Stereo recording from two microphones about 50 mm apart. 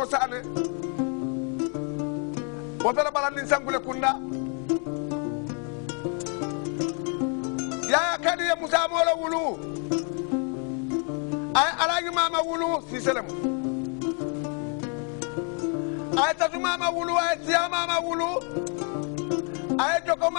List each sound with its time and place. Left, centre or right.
0.0 s music: centre
2.8 s a man's voice: centre
6.0 s music: centre
11.5 s a man's voice: centre
15.6 s speech: centre
19.2 s music: centre